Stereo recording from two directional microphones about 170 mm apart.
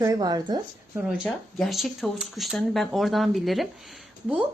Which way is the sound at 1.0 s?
Centre (ahead or behind).